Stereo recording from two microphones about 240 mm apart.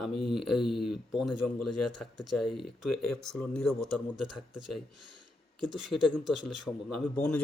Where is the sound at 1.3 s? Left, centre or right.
Left.